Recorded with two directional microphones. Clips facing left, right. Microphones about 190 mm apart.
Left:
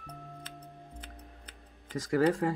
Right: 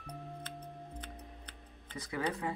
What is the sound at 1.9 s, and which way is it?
Speech, 90° left.